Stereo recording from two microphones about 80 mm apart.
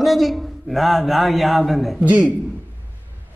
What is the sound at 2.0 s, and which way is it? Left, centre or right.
Speech, centre.